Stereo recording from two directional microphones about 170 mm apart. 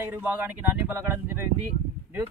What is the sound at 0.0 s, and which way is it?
Speech, 10° right (ahead or behind).